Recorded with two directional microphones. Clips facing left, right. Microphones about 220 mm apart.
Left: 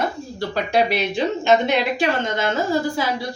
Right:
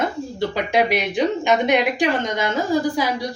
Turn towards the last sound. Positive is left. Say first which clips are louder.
# right 1 dB
turn(degrees=-15)  # may be behind; listen again after turning